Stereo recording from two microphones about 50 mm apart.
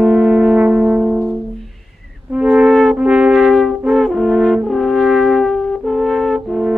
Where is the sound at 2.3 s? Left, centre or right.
Right.